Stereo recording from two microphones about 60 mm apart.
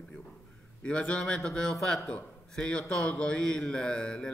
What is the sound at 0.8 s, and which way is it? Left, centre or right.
A man's voice, centre.